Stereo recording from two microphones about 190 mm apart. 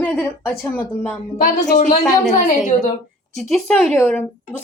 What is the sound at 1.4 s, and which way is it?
A woman's voice, 40° left (ahead or behind).